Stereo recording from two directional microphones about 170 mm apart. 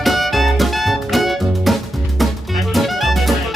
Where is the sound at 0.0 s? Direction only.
Centre (ahead or behind).